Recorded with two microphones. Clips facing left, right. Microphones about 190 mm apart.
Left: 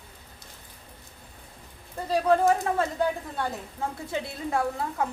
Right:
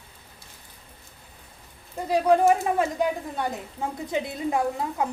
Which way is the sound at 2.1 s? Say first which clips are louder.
Right 2 dB; 15° right (ahead or behind).